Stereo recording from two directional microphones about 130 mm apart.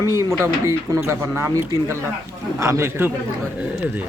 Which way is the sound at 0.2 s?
20° right (ahead or behind).